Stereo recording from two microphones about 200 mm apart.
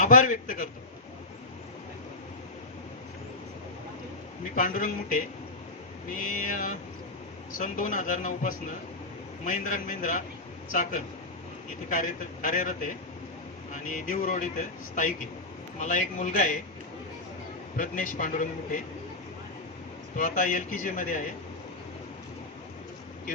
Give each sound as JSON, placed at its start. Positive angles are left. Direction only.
{"t": 0.0, "sound": "a man's voice", "side_deg": 40}
{"t": 4.5, "sound": "a man's voice", "side_deg": 40}
{"t": 15.8, "sound": "a man's voice", "side_deg": 40}
{"t": 17.7, "sound": "a man's voice", "side_deg": 40}
{"t": 20.1, "sound": "a man's voice", "side_deg": 40}